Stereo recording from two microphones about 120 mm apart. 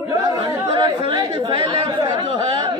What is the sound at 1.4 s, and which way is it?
Chatter, 50° right (ahead or behind).